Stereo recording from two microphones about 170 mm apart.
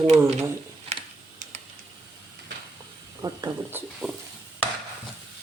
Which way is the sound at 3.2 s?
20° right (ahead or behind).